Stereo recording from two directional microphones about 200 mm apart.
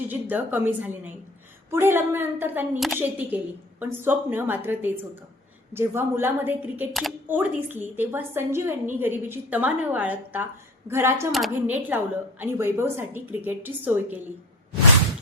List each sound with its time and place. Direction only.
0.1 s a woman's voice: 10° right (ahead or behind)
11.3 s a woman's voice: centre (ahead or behind)